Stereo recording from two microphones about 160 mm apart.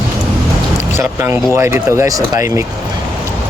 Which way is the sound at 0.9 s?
15° right (ahead or behind).